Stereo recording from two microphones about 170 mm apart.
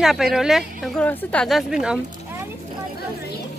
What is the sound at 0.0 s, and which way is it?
A woman's voice, centre (ahead or behind).